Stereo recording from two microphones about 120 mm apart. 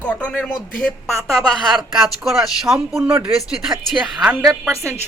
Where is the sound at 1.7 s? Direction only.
Centre (ahead or behind).